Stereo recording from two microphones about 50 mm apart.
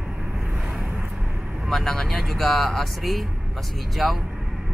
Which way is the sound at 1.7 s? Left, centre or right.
Centre.